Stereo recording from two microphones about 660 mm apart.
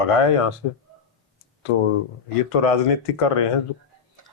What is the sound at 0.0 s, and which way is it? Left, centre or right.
Speech, left.